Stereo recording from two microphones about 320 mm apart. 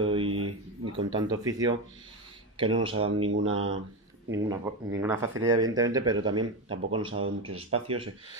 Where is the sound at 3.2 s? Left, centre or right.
Right.